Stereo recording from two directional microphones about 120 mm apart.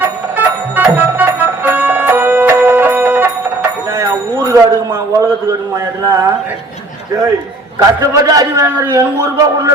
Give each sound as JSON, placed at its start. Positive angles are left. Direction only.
{"t": 0.0, "sound": "music", "side_deg": -15}
{"t": 3.9, "sound": "a sound", "side_deg": -25}
{"t": 7.8, "sound": "a man's voice", "side_deg": -30}